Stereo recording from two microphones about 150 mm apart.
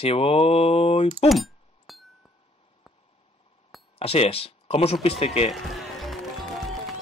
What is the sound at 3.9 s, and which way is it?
Speech, 40° left (ahead or behind).